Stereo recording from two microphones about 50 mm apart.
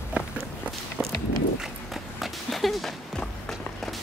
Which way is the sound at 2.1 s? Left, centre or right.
Centre.